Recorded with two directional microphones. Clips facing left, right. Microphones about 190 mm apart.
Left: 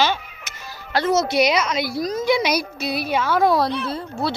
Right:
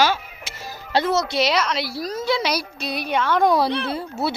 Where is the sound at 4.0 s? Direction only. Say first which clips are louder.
Even; 5° right (ahead or behind).